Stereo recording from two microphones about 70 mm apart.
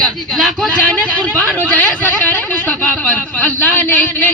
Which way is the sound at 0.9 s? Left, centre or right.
Centre.